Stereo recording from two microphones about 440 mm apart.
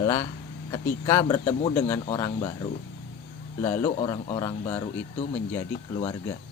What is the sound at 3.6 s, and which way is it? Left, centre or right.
Speech, centre.